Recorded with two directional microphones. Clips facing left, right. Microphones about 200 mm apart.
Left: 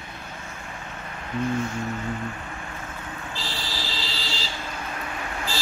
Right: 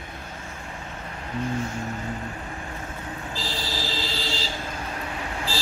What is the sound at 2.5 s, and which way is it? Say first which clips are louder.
Vehicle: right 2 dB; 30° right (ahead or behind).